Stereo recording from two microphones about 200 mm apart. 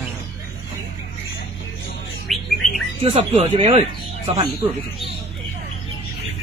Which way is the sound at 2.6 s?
35° left (ahead or behind).